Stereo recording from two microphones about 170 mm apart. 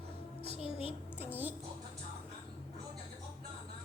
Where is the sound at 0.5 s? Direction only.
30° left (ahead or behind).